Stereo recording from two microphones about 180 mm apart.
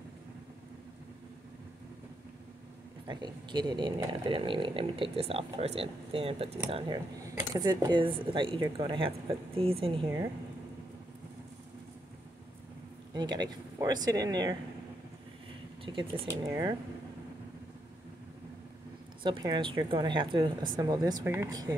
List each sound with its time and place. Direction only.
3.1 s speech: 25° right (ahead or behind)
6.7 s speech: 20° right (ahead or behind)
10.0 s speech: 15° right (ahead or behind)
13.1 s speech: 20° right (ahead or behind)
15.8 s speech: 30° right (ahead or behind)
19.2 s speech: 25° right (ahead or behind)